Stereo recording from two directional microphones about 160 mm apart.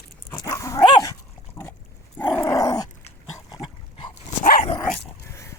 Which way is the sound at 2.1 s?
15° left (ahead or behind).